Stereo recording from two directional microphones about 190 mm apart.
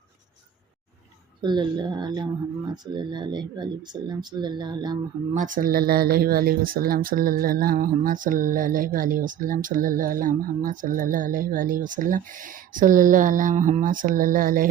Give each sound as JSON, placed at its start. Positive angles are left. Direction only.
{"t": 1.4, "sound": "speech", "side_deg": -25}
{"t": 5.3, "sound": "speech", "side_deg": -45}